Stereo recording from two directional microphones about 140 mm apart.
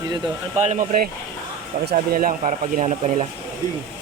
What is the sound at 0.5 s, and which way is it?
Speech, 60° right (ahead or behind).